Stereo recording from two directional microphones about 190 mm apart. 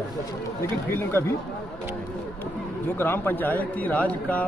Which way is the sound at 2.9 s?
10° left (ahead or behind).